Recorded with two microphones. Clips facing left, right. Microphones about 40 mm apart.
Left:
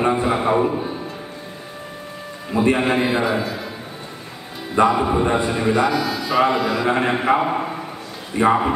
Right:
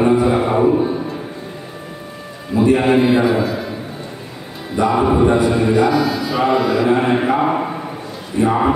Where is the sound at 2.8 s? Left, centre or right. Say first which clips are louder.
Right 5 dB; centre.